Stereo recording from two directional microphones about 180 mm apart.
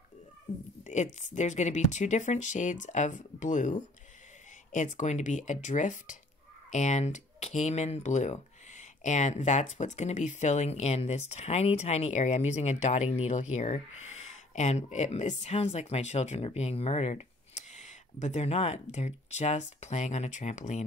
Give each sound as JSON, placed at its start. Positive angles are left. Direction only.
{"t": 0.8, "sound": "speech", "side_deg": 40}